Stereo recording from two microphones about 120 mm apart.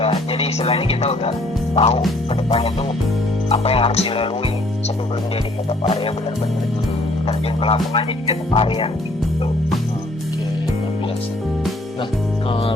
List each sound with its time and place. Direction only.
0.3 s speech: 55° left (ahead or behind)
1.7 s music: 60° left (ahead or behind)
2.3 s speech: 55° left (ahead or behind)
7.3 s speech: 50° left (ahead or behind)